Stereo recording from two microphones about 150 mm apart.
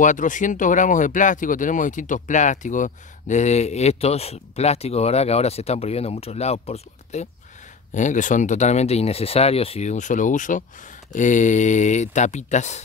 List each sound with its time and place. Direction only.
0.0 s speech: 60° left (ahead or behind)